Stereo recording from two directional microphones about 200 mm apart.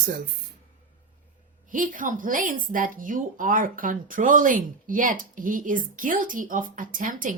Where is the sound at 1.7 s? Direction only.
40° right (ahead or behind).